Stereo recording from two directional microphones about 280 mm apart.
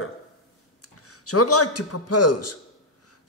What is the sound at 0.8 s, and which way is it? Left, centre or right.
A man's voice, left.